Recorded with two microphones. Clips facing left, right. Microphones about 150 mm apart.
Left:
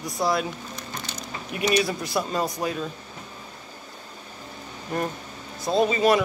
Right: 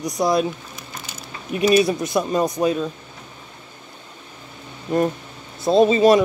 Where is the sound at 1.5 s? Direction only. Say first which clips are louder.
Right 7 dB; 25° right (ahead or behind).